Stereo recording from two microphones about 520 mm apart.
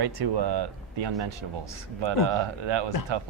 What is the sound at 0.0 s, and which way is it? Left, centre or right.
Speech, right.